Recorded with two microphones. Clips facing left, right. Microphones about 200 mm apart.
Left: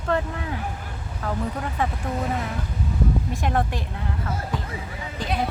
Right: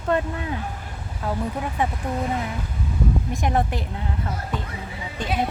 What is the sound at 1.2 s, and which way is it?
Speech, 10° right (ahead or behind).